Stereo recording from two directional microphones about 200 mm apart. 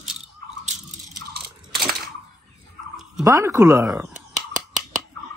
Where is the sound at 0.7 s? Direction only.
40° right (ahead or behind).